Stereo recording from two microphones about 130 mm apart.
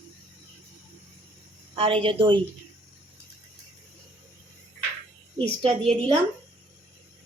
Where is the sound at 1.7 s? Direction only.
45° right (ahead or behind).